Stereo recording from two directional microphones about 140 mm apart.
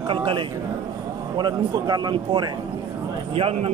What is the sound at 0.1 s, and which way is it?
Speech, 35° right (ahead or behind).